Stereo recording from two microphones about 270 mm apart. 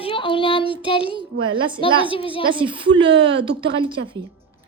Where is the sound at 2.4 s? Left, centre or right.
Centre.